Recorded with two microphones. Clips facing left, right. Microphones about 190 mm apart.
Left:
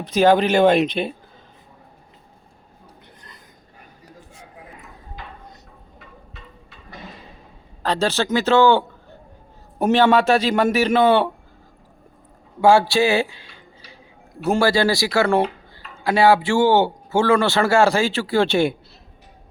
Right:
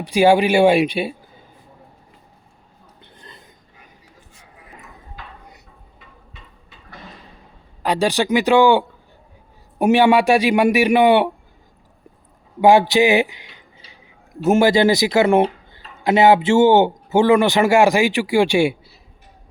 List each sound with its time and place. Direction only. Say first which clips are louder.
0.0 s speech: right 2 dB; 10° right (ahead or behind)
3.0 s a sound: right 2 dB; 25° right (ahead or behind)
7.8 s speech: right 2 dB; 15° right (ahead or behind)
12.6 s speech: right 2 dB; 20° right (ahead or behind)